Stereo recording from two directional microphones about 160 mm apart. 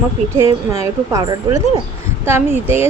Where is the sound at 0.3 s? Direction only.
20° right (ahead or behind).